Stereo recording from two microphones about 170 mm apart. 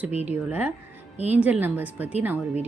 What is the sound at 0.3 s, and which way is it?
A woman's voice, 10° right (ahead or behind).